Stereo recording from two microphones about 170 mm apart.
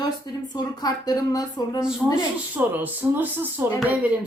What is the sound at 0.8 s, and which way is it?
Speech, 20° left (ahead or behind).